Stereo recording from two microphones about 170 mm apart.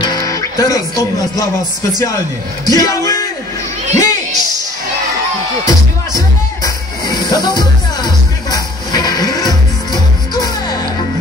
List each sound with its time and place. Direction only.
0.0 s speech: 20° left (ahead or behind)
3.9 s crowd: 20° left (ahead or behind)
5.7 s music: 20° left (ahead or behind)